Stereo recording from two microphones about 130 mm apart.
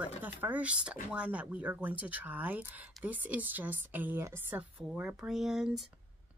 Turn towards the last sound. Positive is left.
turn(degrees=-5)  # may be behind; listen again after turning